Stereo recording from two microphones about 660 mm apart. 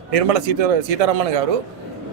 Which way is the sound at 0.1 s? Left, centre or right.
Right.